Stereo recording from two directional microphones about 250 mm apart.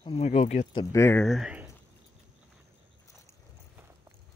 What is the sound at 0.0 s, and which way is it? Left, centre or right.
Speech, left.